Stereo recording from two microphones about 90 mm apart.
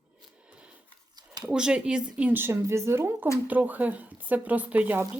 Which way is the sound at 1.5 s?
10° right (ahead or behind).